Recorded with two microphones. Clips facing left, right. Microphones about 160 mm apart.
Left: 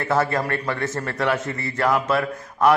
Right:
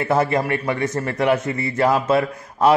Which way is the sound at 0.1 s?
20° right (ahead or behind).